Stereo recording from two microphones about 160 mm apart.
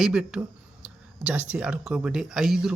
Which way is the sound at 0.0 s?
5° right (ahead or behind).